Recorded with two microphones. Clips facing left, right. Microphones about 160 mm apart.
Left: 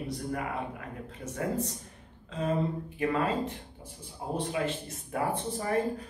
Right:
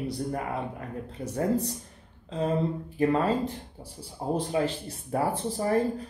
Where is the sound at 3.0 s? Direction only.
35° right (ahead or behind).